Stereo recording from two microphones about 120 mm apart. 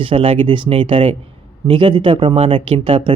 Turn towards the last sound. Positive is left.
turn(degrees=-50)  # may be behind; listen again after turning